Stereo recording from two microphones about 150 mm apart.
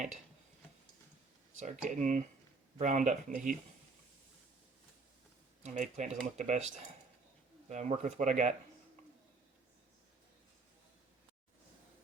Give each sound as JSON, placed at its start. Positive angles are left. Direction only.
{"t": 1.5, "sound": "speech", "side_deg": -55}
{"t": 5.6, "sound": "speech", "side_deg": -55}
{"t": 7.7, "sound": "speech", "side_deg": -50}